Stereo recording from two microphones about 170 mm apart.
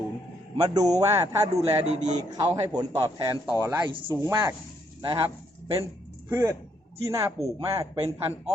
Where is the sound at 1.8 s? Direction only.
45° right (ahead or behind).